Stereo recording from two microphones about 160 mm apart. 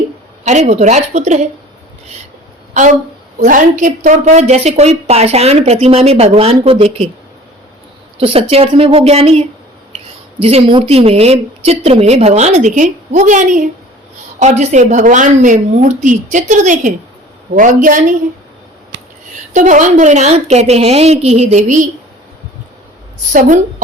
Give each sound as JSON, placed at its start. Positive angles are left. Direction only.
{"t": 0.4, "sound": "a woman's voice", "side_deg": -45}
{"t": 3.3, "sound": "a woman's voice", "side_deg": -55}
{"t": 8.2, "sound": "a woman's voice", "side_deg": -35}
{"t": 10.4, "sound": "a woman's voice", "side_deg": -35}
{"t": 19.5, "sound": "a woman's voice", "side_deg": -50}